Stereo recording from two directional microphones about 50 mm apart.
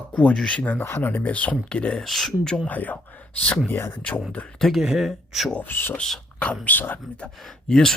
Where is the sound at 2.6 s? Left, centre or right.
Left.